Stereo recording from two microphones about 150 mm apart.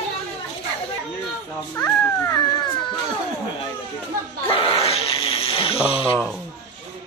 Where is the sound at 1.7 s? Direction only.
15° left (ahead or behind).